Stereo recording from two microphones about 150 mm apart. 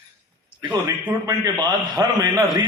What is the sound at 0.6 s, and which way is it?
A man's voice, 30° right (ahead or behind).